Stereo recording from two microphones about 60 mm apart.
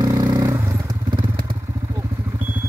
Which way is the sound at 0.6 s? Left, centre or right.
Right.